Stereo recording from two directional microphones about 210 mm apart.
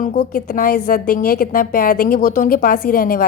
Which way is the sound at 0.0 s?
40° left (ahead or behind).